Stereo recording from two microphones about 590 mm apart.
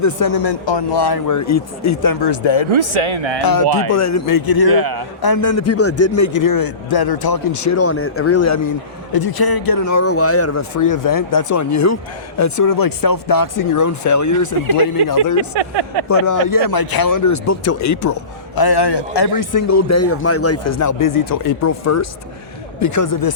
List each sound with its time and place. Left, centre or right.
0.0 s speech: left
2.7 s a man's voice: right
3.4 s speech: left
4.7 s a man's voice: right
5.2 s speech: left
15.5 s a man's voice: right
16.0 s speech: left